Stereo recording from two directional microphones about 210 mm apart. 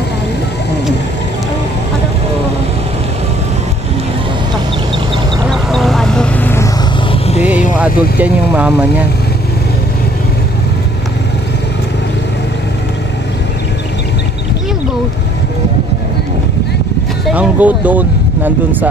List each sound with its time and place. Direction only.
5.5 s a sound: centre (ahead or behind)
7.1 s vehicle: 30° left (ahead or behind)
7.8 s speech: 5° right (ahead or behind)
17.3 s speech: 5° right (ahead or behind)